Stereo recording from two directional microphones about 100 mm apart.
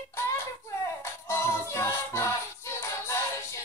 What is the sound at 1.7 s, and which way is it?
Music, 30° left (ahead or behind).